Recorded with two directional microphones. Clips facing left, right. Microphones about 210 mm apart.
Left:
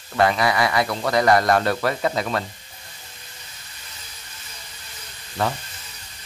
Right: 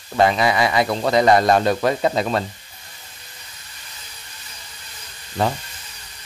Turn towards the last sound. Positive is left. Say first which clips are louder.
# right 3 dB
turn(degrees=-20)  # may be behind; listen again after turning